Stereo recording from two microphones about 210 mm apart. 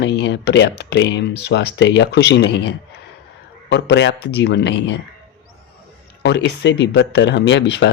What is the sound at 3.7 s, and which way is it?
Speech, 55° left (ahead or behind).